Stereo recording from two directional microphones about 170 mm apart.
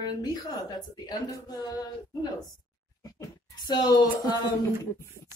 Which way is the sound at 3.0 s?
25° left (ahead or behind).